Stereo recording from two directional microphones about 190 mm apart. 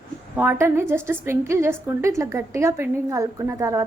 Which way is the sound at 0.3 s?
10° right (ahead or behind).